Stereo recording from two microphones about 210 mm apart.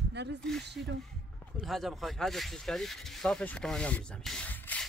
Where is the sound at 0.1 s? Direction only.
55° right (ahead or behind).